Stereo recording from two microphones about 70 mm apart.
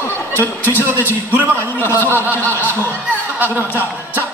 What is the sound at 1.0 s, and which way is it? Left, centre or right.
Speech, right.